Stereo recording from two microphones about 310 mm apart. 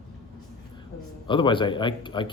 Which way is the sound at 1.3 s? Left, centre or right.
Centre.